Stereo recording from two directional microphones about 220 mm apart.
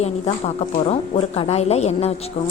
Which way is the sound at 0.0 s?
30° left (ahead or behind).